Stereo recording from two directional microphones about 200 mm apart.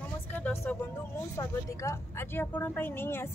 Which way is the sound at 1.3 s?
15° left (ahead or behind).